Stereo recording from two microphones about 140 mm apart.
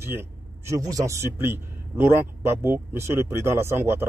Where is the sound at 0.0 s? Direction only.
15° right (ahead or behind).